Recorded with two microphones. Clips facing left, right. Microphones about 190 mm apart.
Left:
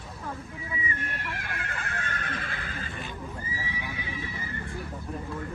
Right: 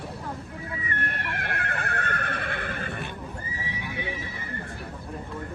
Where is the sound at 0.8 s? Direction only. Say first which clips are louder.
Right 3 dB; 60° right (ahead or behind).